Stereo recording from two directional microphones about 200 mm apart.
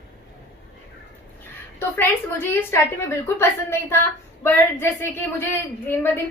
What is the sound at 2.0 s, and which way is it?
A woman's voice, 10° left (ahead or behind).